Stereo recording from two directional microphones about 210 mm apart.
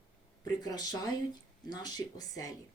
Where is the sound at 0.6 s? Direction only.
20° left (ahead or behind).